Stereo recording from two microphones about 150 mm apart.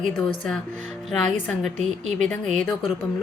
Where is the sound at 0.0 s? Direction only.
5° left (ahead or behind).